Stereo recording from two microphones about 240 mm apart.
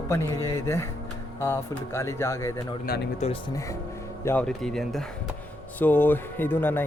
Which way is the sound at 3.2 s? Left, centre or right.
Left.